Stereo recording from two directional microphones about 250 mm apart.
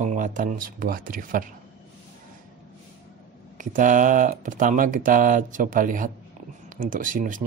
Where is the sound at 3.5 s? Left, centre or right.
Right.